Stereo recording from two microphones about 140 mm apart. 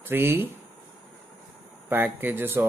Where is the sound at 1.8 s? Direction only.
15° right (ahead or behind).